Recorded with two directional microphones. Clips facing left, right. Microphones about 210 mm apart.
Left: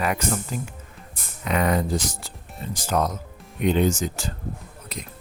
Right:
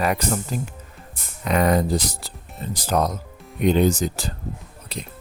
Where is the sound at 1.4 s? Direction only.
40° right (ahead or behind).